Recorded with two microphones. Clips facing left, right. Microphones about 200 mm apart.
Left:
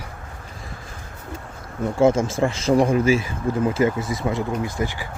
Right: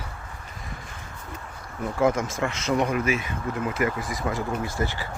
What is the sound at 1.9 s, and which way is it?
Speech, 25° left (ahead or behind).